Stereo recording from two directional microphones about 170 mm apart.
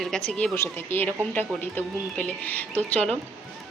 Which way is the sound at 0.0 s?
5° left (ahead or behind).